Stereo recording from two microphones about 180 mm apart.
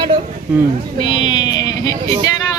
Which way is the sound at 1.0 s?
30° left (ahead or behind).